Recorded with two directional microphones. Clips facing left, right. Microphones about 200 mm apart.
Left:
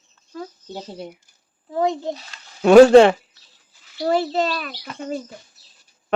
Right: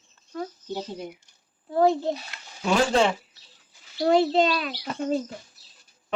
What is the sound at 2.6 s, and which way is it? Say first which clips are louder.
Speech: left 13 dB; 70° left (ahead or behind).